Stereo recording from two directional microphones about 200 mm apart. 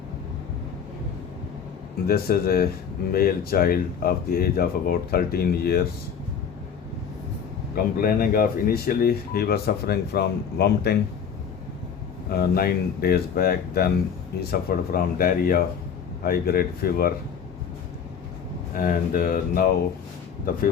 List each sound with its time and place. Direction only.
2.0 s speech: 50° left (ahead or behind)
7.9 s speech: 45° left (ahead or behind)
12.4 s speech: 50° left (ahead or behind)
18.7 s speech: 45° left (ahead or behind)